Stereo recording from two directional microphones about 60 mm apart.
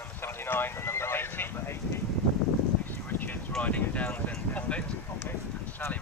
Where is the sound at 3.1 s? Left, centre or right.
Left.